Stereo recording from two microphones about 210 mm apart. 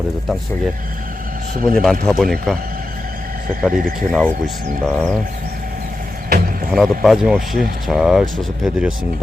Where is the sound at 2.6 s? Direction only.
45° right (ahead or behind).